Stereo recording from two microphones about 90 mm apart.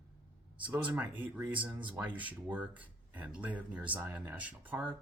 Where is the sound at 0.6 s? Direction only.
15° right (ahead or behind).